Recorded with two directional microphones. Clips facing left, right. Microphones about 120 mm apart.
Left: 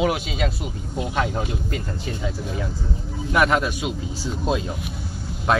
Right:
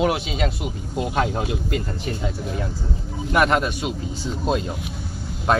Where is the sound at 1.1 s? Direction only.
30° right (ahead or behind).